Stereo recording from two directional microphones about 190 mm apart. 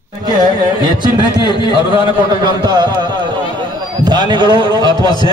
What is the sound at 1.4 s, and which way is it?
Speech, 25° left (ahead or behind).